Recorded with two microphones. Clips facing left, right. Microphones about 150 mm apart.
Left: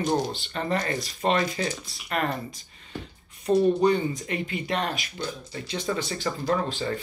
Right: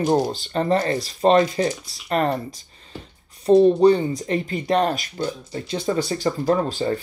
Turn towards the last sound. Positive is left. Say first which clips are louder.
# right 5 dB
turn(degrees=-40)  # may be behind; listen again after turning